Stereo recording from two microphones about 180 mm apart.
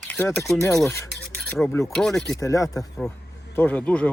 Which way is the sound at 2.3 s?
15° left (ahead or behind).